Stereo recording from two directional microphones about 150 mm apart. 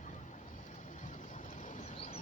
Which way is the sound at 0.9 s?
55° left (ahead or behind).